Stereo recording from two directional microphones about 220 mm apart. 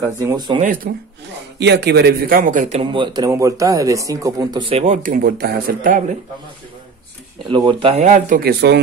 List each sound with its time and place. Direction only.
0.2 s speech: 15° right (ahead or behind)
0.8 s speech: 40° right (ahead or behind)
2.8 s speech: 20° right (ahead or behind); by 6.1 s 40° right (ahead or behind)
7.4 s speech: 20° right (ahead or behind); by 8.8 s 50° right (ahead or behind)